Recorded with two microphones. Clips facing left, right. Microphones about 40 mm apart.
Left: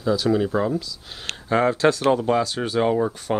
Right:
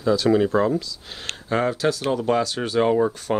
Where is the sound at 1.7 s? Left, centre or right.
Left.